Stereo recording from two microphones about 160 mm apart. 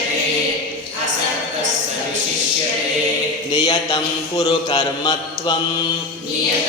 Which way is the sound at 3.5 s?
25° left (ahead or behind).